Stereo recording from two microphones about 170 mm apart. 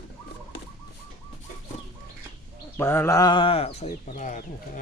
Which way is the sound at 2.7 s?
15° left (ahead or behind).